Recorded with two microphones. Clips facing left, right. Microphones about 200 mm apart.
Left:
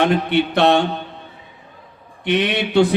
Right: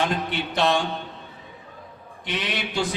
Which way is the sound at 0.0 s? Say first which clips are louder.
Left 9 dB; 65° left (ahead or behind).